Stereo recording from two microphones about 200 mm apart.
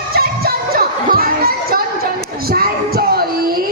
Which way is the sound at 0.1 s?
50° right (ahead or behind).